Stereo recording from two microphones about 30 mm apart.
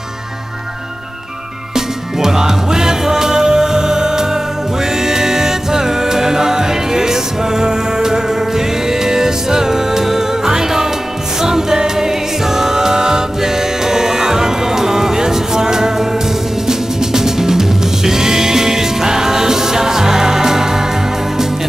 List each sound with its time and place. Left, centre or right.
2.1 s music: centre